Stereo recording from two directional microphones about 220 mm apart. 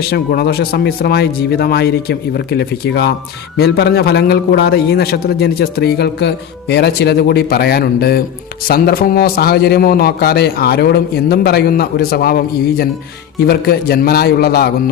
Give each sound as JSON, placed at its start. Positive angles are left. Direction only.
{"t": 0.1, "sound": "a man's voice", "side_deg": 45}